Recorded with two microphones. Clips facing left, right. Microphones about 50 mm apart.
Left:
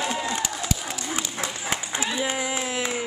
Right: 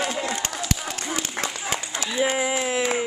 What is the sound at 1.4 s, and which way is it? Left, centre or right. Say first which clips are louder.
Run: right 2 dB; right.